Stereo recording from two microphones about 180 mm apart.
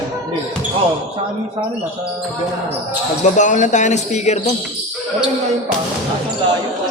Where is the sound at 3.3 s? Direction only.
45° left (ahead or behind).